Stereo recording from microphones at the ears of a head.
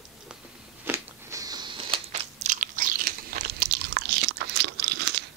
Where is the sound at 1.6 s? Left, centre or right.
Right.